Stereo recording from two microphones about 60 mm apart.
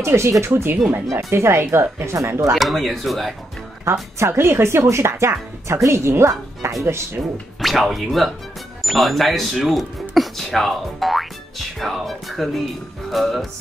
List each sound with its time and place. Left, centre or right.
0.0 s speech: right
0.5 s speech: right
1.1 s speech: right
2.5 s speech: centre
3.8 s speech: right
7.6 s speech: centre